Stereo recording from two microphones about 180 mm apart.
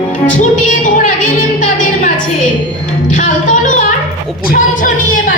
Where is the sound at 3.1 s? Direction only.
45° left (ahead or behind).